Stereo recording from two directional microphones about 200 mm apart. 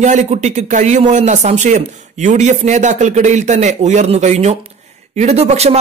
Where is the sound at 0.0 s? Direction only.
35° right (ahead or behind).